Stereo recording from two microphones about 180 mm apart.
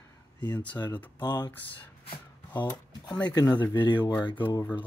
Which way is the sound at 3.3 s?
20° left (ahead or behind).